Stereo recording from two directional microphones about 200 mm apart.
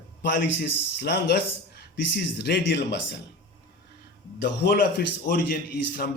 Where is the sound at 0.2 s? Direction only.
60° left (ahead or behind).